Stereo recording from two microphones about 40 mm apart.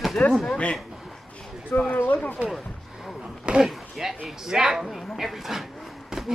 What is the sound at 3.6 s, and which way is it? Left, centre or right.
Speech, centre.